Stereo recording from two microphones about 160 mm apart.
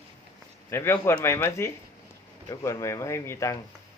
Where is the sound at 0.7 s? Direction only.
15° left (ahead or behind).